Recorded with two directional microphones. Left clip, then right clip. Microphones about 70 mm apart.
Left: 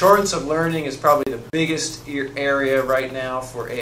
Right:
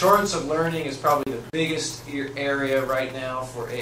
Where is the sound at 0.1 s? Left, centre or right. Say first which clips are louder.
Left 4 dB; left.